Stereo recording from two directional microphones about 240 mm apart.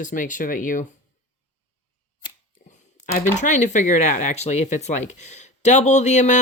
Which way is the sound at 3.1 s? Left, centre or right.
Left.